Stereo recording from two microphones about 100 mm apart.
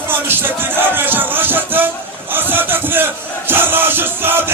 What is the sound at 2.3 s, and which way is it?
Crowd, 20° right (ahead or behind).